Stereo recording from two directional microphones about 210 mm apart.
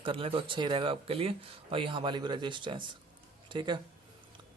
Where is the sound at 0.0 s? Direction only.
25° right (ahead or behind).